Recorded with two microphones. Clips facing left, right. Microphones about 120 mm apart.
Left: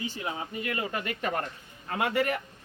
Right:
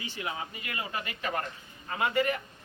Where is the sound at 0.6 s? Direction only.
45° left (ahead or behind).